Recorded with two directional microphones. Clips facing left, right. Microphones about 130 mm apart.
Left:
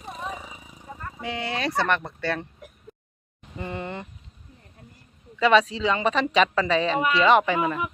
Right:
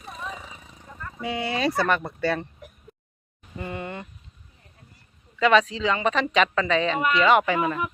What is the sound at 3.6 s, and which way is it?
Speech, 25° left (ahead or behind).